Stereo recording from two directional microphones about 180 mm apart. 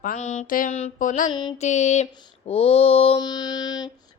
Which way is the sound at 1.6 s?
40° left (ahead or behind).